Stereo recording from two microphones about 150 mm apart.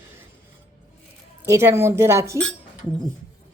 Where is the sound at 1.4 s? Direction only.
20° right (ahead or behind).